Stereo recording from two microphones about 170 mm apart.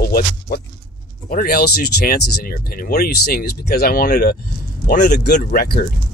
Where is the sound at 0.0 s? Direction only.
60° left (ahead or behind).